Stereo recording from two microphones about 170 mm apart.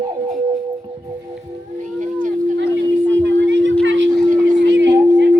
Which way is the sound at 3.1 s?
90° right.